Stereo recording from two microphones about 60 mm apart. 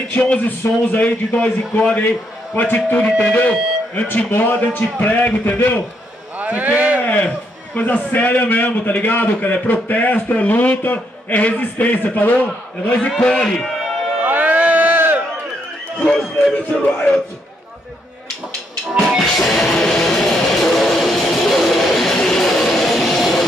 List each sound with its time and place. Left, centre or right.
0.2 s a man's voice: left
6.3 s speech: right
7.0 s a man's voice: left
13.2 s speech: centre
14.2 s crowd: right
16.2 s speech: centre
19.0 s music: centre